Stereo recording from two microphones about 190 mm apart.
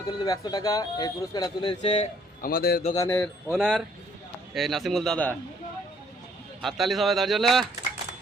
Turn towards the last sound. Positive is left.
turn(degrees=0)  # may be behind; listen again after turning